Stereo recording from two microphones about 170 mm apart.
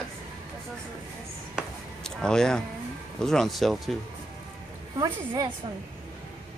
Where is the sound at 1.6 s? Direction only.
5° left (ahead or behind).